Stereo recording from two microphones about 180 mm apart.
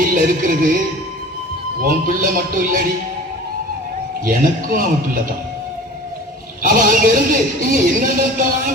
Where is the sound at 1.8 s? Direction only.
50° right (ahead or behind).